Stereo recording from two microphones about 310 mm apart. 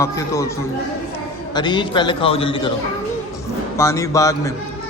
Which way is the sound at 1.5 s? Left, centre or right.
Centre.